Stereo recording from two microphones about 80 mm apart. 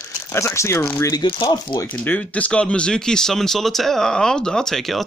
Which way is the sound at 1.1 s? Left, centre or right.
Left.